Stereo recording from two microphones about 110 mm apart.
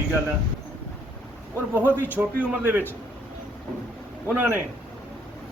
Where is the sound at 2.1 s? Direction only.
15° right (ahead or behind).